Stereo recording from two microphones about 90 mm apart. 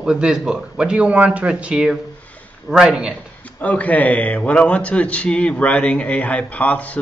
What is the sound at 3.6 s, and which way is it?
Speech, 15° left (ahead or behind).